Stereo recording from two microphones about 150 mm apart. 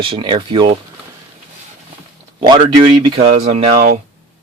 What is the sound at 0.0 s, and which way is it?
Speech, 35° right (ahead or behind).